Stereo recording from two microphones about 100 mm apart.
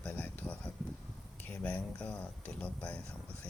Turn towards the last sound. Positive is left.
turn(degrees=10)  # may be behind; listen again after turning